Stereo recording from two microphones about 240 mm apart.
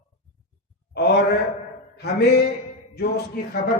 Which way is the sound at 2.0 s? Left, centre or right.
Left.